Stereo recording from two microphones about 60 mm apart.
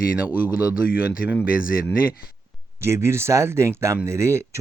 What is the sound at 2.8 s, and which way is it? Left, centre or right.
Speech, right.